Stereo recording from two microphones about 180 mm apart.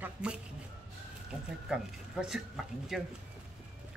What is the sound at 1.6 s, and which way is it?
Speech, 5° right (ahead or behind).